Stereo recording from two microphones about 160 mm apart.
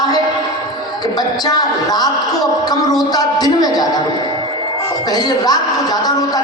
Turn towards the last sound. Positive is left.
turn(degrees=25)  # may be behind; listen again after turning